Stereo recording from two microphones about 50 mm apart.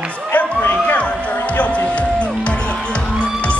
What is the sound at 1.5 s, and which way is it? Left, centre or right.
Music, left.